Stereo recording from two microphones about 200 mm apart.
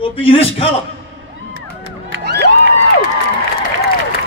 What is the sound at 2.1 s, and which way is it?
Crowd, 60° right (ahead or behind).